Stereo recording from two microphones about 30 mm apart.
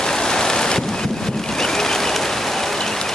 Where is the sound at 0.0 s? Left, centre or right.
Left.